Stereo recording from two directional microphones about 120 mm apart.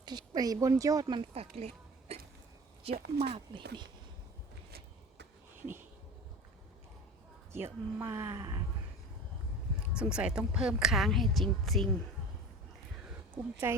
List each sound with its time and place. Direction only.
0.0 s speech: 35° right (ahead or behind)
1.3 s a sound: 60° right (ahead or behind)
2.8 s speech: 60° right (ahead or behind)
7.5 s speech: 20° right (ahead or behind)
9.9 s speech: 10° right (ahead or behind)
13.3 s speech: 20° right (ahead or behind)